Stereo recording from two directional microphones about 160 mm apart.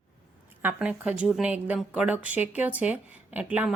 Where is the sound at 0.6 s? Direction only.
10° right (ahead or behind).